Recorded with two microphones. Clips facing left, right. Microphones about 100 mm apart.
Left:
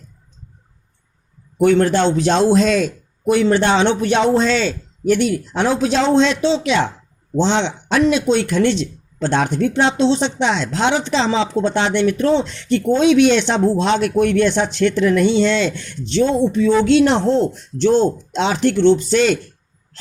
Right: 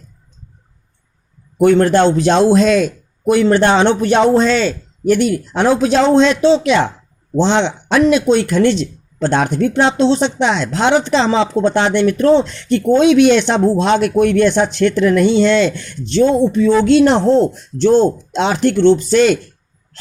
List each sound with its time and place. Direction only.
1.6 s speech: 50° right (ahead or behind)
3.2 s speech: 55° right (ahead or behind)